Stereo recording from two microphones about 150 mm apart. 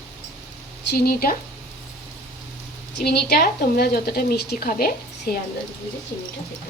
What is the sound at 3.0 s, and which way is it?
A woman's voice, 90° left.